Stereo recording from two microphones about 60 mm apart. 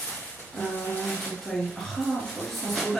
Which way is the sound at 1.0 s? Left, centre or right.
Centre.